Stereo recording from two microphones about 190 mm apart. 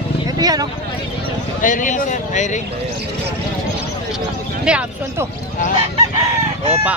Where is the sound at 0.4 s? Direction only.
20° right (ahead or behind).